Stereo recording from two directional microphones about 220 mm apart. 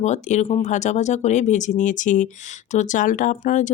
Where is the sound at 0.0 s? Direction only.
30° left (ahead or behind).